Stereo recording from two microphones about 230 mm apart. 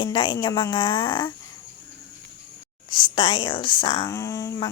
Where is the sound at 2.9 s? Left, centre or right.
Left.